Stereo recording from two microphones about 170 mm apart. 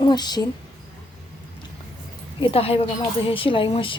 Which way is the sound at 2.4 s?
35° left (ahead or behind).